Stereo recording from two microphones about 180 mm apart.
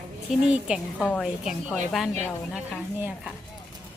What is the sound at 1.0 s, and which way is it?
A woman's voice, 10° left (ahead or behind).